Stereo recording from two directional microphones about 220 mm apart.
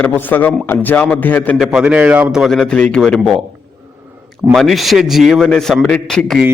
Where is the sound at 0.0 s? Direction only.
10° left (ahead or behind).